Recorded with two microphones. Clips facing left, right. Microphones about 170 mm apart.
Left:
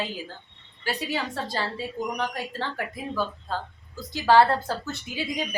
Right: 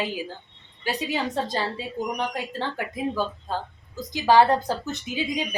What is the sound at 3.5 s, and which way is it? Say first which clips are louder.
A woman's voice: right 2 dB; 15° right (ahead or behind).